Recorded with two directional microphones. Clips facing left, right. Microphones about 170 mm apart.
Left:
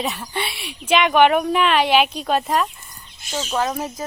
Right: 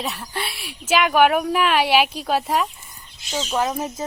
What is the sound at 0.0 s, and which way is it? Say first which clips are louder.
Speech: left 3 dB; centre (ahead or behind).